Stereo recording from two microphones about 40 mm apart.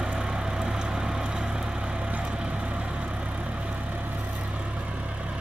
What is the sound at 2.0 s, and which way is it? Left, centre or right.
Vehicle, right.